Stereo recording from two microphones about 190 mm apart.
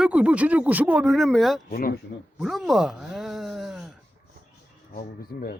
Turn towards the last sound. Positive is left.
turn(degrees=50)  # may be behind; listen again after turning